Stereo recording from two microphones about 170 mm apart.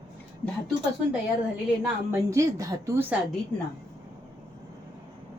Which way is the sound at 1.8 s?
15° right (ahead or behind).